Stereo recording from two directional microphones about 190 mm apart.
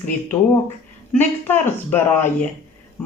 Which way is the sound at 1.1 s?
10° left (ahead or behind).